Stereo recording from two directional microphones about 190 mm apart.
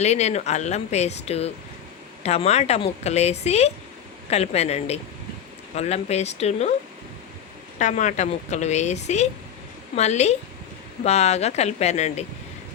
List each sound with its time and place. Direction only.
0.0 s speech: 35° left (ahead or behind)
7.8 s speech: 40° left (ahead or behind)